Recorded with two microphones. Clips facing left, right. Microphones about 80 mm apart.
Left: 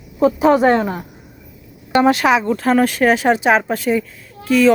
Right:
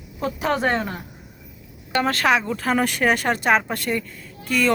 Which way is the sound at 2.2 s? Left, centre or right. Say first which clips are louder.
Left 5 dB; centre.